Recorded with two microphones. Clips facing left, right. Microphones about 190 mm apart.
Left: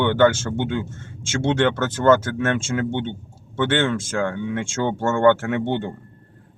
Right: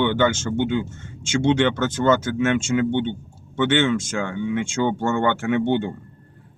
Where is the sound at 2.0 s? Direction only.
55° left (ahead or behind).